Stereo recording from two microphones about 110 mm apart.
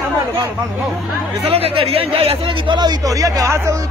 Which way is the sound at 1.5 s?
60° right (ahead or behind).